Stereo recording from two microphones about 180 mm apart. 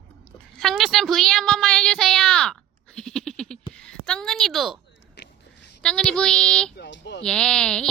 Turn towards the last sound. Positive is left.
turn(degrees=5)  # may be behind; listen again after turning